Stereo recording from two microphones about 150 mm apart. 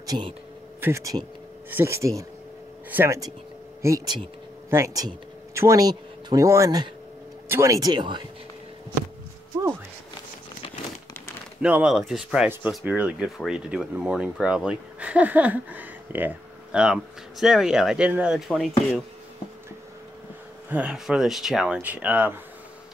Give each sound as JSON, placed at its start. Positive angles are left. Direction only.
{"t": 0.0, "sound": "speech", "side_deg": -25}
{"t": 3.8, "sound": "speech", "side_deg": -25}
{"t": 11.6, "sound": "speech", "side_deg": -5}
{"t": 20.7, "sound": "speech", "side_deg": -5}